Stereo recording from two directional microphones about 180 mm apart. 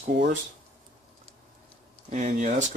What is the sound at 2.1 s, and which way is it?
Speech, 45° right (ahead or behind).